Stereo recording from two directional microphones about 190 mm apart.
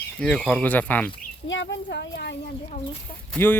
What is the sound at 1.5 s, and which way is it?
Speech, 75° left (ahead or behind).